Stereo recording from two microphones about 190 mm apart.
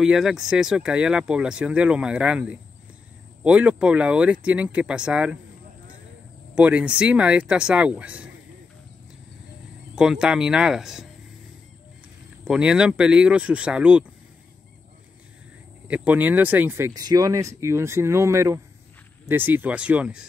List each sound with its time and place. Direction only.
0.0 s speech: centre (ahead or behind)
6.5 s speech: 5° right (ahead or behind)
9.9 s speech: 5° right (ahead or behind)
12.4 s speech: 5° right (ahead or behind)
15.9 s speech: 10° right (ahead or behind)